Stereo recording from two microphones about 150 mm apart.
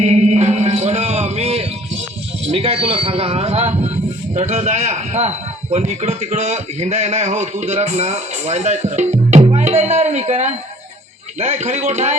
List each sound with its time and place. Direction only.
0.0 s music: 50° right (ahead or behind)
2.5 s a man's voice: 40° right (ahead or behind)